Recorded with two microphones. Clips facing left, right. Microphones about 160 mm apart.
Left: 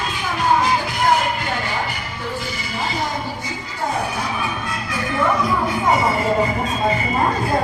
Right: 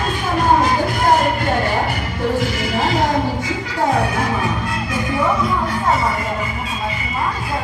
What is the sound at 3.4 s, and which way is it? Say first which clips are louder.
Music: right 6 dB; 70° right (ahead or behind).